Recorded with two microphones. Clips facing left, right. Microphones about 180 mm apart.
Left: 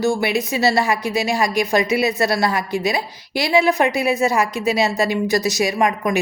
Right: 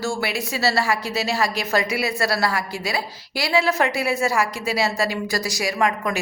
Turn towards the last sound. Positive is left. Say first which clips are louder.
# left 3 dB
turn(degrees=20)  # may be behind; listen again after turning